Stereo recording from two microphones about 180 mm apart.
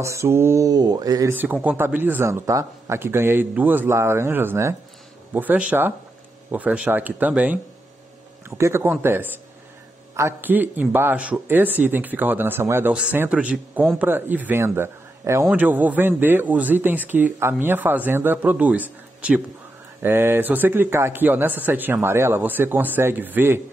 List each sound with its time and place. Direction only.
0.0 s speech: 15° right (ahead or behind)
1.3 s speech: 10° right (ahead or behind)